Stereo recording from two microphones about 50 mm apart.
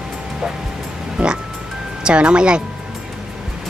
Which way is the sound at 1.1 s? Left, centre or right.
Centre.